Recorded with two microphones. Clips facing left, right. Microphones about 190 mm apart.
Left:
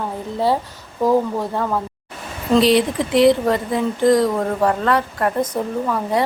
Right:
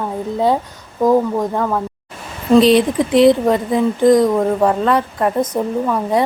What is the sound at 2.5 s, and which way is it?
Speech, 20° right (ahead or behind).